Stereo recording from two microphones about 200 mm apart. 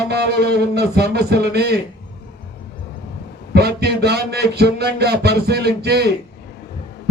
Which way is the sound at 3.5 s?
55° right (ahead or behind).